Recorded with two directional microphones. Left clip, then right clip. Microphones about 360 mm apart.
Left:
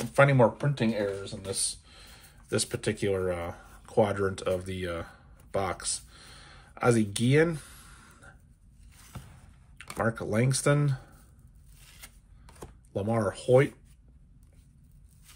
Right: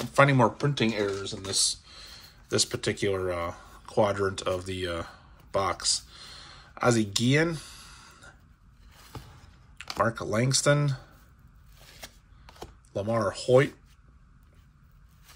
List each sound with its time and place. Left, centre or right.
0.0 s speech: centre
9.8 s speech: centre
11.8 s a sound: centre
12.9 s speech: centre